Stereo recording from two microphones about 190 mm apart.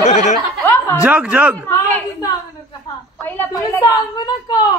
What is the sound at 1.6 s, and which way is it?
A woman's voice, 15° left (ahead or behind).